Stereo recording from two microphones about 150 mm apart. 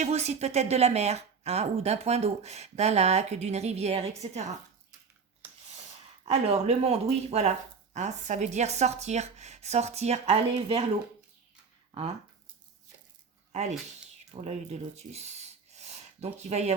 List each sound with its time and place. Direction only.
0.0 s speech: 45° right (ahead or behind)
5.4 s a sound: 15° right (ahead or behind)
6.2 s speech: 45° right (ahead or behind)
11.9 s speech: 40° right (ahead or behind)
13.5 s speech: 50° right (ahead or behind)